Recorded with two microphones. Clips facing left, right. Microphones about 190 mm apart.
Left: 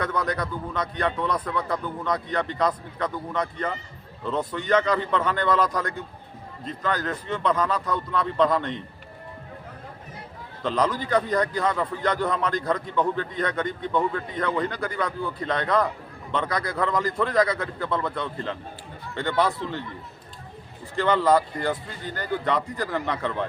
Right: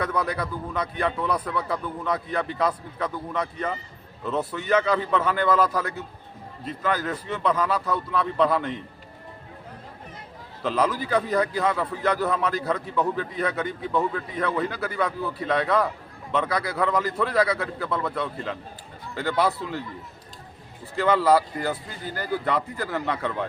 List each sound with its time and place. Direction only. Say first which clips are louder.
0.0 s a man's voice: even; 10° right (ahead or behind)
10.6 s a man's voice: even; 5° right (ahead or behind)
20.9 s speech: right 1 dB; 5° right (ahead or behind)